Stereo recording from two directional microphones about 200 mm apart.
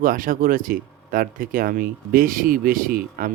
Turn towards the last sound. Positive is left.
turn(degrees=-45)  # may be behind; listen again after turning